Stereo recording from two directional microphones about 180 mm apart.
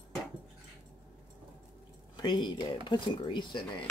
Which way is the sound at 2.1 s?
25° left (ahead or behind).